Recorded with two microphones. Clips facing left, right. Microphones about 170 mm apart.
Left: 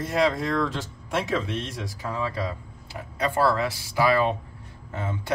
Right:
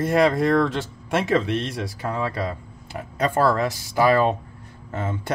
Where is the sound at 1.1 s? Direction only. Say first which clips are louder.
Right 5 dB; 70° right (ahead or behind); by 5.3 s 50° right (ahead or behind).